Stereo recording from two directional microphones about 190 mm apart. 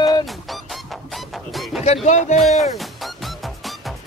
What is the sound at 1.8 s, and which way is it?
Music, 35° left (ahead or behind).